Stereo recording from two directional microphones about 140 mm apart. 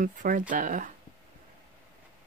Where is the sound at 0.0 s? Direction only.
70° right (ahead or behind).